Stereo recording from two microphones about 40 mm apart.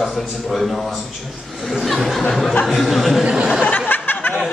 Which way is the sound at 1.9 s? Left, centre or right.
Centre.